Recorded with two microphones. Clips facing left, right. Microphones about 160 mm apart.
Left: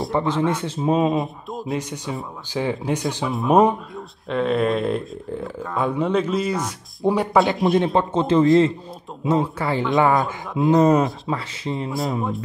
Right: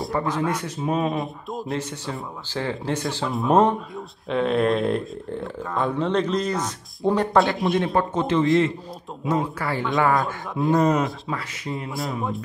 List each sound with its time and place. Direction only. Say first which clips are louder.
0.1 s a man's voice: left 3 dB; 25° left (ahead or behind)
1.2 s speech: left 1 dB; centre (ahead or behind)
1.8 s speech: left 2 dB; 15° left (ahead or behind)
3.3 s speech: left 2 dB; centre (ahead or behind)
7.8 s a man's voice: left 2 dB; 25° left (ahead or behind)
10.2 s speech: left 3 dB; centre (ahead or behind)
10.7 s a man's voice: left 4 dB; 25° left (ahead or behind)
11.9 s speech: left 3 dB; centre (ahead or behind)